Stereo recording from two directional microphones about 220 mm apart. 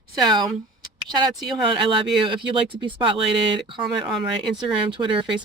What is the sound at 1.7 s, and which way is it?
Speech, 20° right (ahead or behind).